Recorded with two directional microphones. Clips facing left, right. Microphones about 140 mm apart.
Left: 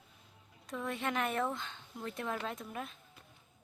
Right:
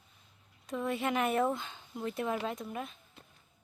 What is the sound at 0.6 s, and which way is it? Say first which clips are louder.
Speech: right 4 dB; 5° right (ahead or behind).